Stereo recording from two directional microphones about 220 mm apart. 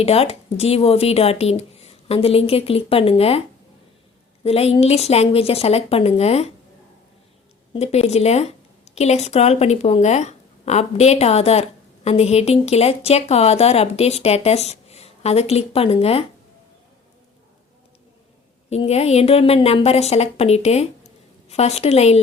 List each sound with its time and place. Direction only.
0.0 s speech: 25° left (ahead or behind)
4.4 s speech: 25° left (ahead or behind)
7.7 s a woman's voice: 30° left (ahead or behind)
18.7 s speech: 30° left (ahead or behind)